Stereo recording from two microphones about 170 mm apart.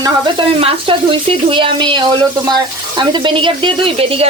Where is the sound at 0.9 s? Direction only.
35° right (ahead or behind).